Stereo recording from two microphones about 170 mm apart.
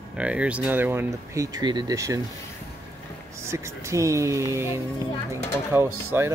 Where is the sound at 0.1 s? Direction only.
5° right (ahead or behind).